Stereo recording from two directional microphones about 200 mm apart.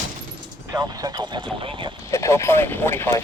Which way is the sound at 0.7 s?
20° right (ahead or behind).